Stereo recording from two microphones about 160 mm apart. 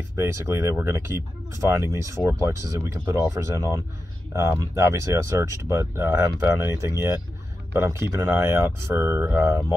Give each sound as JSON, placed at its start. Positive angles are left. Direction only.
{"t": 0.2, "sound": "speech", "side_deg": -15}